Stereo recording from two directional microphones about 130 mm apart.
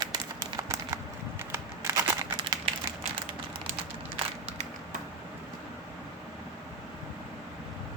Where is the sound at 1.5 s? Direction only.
20° right (ahead or behind).